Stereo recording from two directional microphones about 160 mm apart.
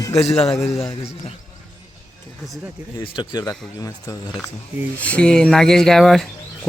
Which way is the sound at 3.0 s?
30° left (ahead or behind).